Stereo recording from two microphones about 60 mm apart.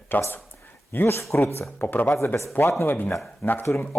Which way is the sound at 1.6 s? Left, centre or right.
Left.